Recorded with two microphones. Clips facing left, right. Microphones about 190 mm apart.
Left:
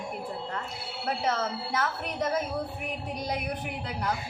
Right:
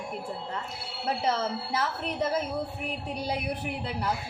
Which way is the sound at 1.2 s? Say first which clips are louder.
Right 1 dB; 30° right (ahead or behind).